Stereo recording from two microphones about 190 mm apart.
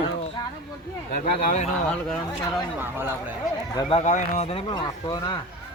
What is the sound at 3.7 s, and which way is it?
Speech, 20° left (ahead or behind).